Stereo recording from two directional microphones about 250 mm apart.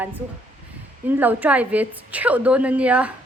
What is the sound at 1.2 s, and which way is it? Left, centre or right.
A woman's voice, centre.